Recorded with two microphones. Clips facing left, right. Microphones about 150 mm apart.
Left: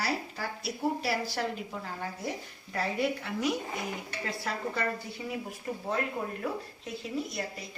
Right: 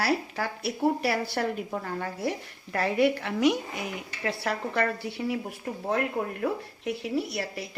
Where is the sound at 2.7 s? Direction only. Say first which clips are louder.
Right 6 dB; 70° right (ahead or behind).